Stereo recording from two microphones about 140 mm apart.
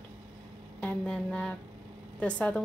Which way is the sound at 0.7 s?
10° left (ahead or behind).